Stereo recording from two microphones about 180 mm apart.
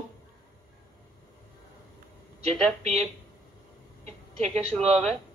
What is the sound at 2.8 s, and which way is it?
Speech, 35° right (ahead or behind).